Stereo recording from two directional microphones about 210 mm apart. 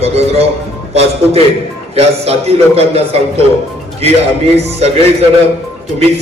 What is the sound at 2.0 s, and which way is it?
A man's voice, 30° right (ahead or behind).